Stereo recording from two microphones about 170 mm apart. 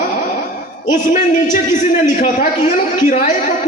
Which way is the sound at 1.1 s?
45° left (ahead or behind).